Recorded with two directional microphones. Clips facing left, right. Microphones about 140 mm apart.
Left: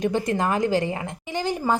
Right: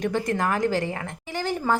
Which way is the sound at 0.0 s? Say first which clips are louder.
Left 2 dB; 20° left (ahead or behind).